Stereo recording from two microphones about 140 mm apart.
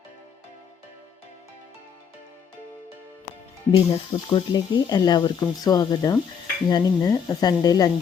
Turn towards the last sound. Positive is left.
turn(degrees=30)  # may be behind; listen again after turning